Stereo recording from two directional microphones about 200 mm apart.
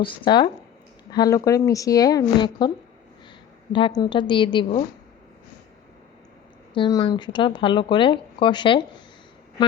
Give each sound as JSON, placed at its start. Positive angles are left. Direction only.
{"t": 0.0, "sound": "a woman's voice", "side_deg": 25}
{"t": 6.7, "sound": "speech", "side_deg": 20}